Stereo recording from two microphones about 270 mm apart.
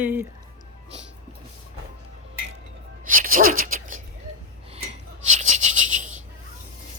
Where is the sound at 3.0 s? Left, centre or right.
Right.